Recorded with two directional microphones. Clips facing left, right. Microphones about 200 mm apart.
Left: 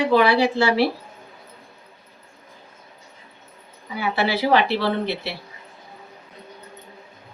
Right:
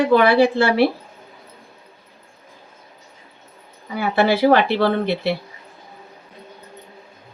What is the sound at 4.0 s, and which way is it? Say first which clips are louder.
Speech: right 6 dB; 50° right (ahead or behind).